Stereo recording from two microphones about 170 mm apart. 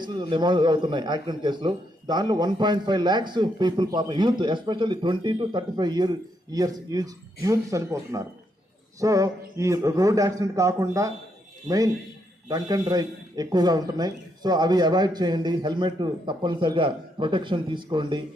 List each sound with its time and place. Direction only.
0.0 s a man's voice: 25° right (ahead or behind)
12.5 s a man's voice: 25° right (ahead or behind)